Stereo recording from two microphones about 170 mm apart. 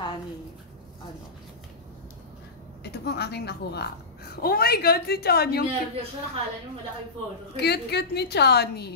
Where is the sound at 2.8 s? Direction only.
75° left (ahead or behind).